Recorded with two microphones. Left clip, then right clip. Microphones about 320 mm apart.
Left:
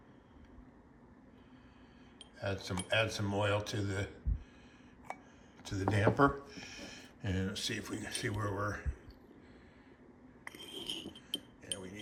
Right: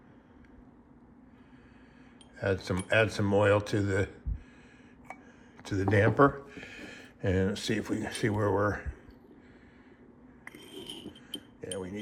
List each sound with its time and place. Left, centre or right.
2.4 s speech: centre
5.6 s speech: centre
10.4 s glass: centre